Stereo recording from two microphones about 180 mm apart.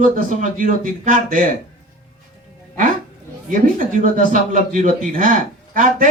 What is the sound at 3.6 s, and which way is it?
Speech, 45° right (ahead or behind).